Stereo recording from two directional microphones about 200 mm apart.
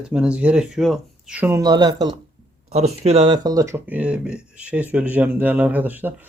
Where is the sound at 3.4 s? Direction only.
15° right (ahead or behind).